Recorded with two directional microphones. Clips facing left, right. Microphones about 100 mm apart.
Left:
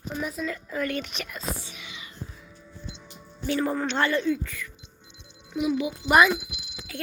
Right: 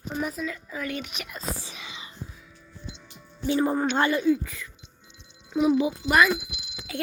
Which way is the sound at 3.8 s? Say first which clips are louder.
Right 2 dB; 10° right (ahead or behind).